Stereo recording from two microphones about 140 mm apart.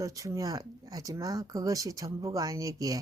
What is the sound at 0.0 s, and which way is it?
A woman's voice, 25° right (ahead or behind).